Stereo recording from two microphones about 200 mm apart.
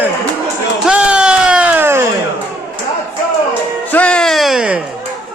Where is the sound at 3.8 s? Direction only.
5° left (ahead or behind).